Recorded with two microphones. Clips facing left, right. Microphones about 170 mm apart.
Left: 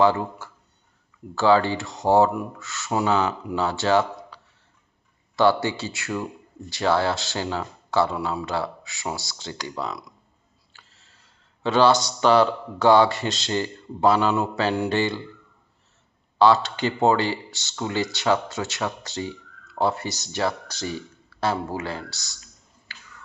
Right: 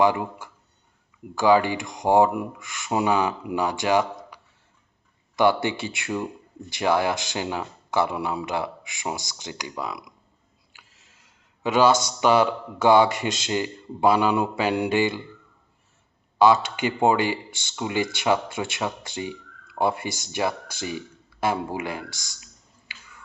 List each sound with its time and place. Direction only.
0.0 s speech: 15° right (ahead or behind)
5.4 s speech: 20° right (ahead or behind)
16.4 s speech: 15° right (ahead or behind)